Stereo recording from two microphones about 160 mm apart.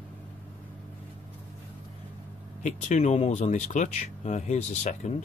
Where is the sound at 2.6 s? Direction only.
50° left (ahead or behind).